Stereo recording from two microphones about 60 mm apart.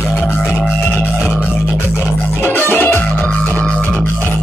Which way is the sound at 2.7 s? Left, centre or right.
Left.